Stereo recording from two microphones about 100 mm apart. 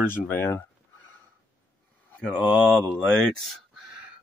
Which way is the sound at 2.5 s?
5° left (ahead or behind).